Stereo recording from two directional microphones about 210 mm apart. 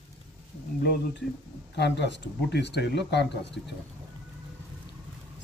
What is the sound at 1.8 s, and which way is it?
Speech, 55° left (ahead or behind).